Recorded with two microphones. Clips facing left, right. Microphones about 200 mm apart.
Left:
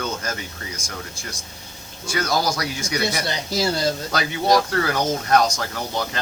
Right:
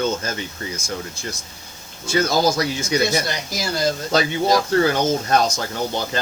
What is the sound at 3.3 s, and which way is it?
Speech, 30° left (ahead or behind).